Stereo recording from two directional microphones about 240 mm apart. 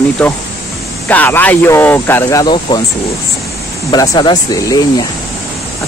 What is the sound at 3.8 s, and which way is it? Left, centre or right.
Speech, centre.